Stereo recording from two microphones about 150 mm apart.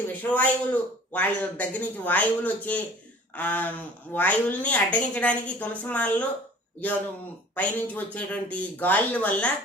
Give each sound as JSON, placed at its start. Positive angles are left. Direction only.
{"t": 0.2, "sound": "a woman's voice", "side_deg": 10}
{"t": 7.5, "sound": "a woman's voice", "side_deg": 10}